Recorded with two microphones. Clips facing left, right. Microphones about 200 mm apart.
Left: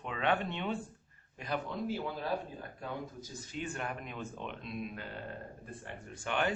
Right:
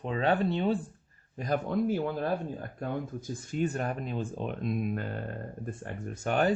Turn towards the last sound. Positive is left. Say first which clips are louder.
# right 7 dB
turn(degrees=-40)  # may be behind; listen again after turning